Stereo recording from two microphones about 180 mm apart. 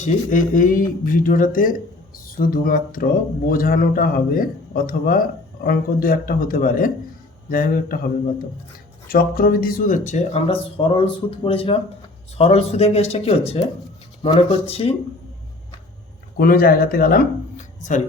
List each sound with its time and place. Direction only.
0.0 s speech: 45° left (ahead or behind)
9.0 s speech: 55° left (ahead or behind); by 14.9 s 35° left (ahead or behind)
16.4 s speech: 55° left (ahead or behind)